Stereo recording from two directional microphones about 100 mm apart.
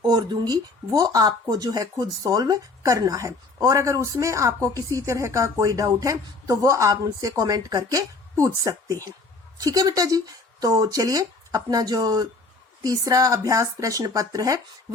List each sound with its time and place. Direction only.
0.0 s speech: 45° right (ahead or behind)